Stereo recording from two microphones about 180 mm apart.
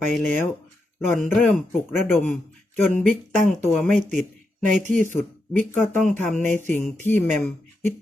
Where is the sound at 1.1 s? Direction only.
10° left (ahead or behind).